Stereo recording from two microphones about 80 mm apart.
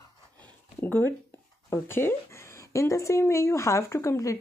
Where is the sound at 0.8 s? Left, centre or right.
Left.